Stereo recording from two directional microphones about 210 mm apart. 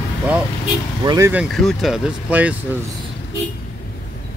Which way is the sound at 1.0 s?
15° right (ahead or behind).